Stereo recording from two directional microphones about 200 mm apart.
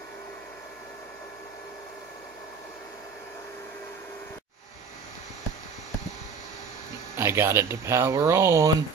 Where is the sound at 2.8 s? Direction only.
15° left (ahead or behind).